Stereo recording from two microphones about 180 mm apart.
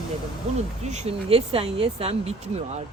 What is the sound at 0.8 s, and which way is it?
Speech, 40° right (ahead or behind).